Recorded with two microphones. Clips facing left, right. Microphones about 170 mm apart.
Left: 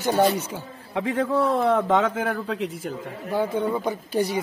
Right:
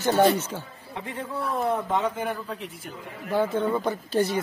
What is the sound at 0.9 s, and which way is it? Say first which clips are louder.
Speech: left 10 dB; 90° left.